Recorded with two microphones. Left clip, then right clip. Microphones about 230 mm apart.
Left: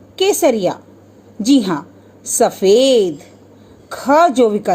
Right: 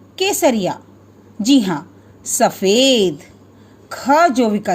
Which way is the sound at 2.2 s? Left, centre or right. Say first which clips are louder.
Left 2 dB; right.